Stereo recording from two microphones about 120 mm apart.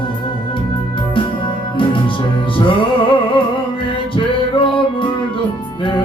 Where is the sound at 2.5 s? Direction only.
45° left (ahead or behind).